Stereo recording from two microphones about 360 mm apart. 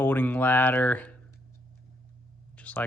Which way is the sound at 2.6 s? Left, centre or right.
Centre.